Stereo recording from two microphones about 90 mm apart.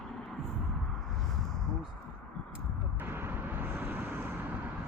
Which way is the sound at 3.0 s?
25° right (ahead or behind).